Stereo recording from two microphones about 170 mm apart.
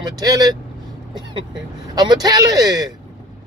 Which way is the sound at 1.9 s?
25° right (ahead or behind).